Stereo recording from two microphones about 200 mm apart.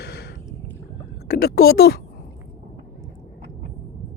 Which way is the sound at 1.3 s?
50° left (ahead or behind).